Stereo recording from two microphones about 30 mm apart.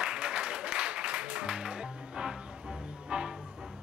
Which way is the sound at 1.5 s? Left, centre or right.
Right.